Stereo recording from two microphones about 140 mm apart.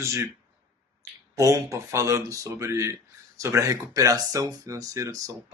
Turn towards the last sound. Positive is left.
turn(degrees=-25)  # may be behind; listen again after turning